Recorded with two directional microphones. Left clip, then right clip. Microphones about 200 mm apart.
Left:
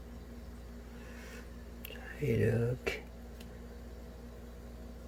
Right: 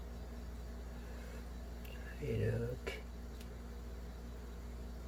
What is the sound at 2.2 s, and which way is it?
Speech, 45° left (ahead or behind).